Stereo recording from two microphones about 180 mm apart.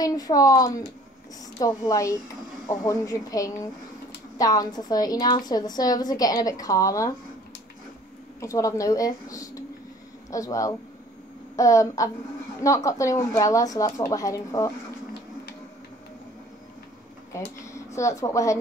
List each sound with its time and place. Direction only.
0.0 s a woman's voice: 20° left (ahead or behind)
8.4 s a woman's voice: 15° left (ahead or behind)
17.3 s speech: 15° left (ahead or behind)